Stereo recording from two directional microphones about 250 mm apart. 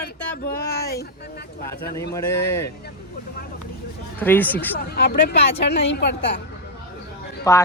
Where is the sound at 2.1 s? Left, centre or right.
Centre.